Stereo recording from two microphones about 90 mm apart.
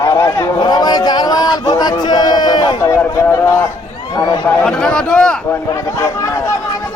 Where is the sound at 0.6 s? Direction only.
50° left (ahead or behind).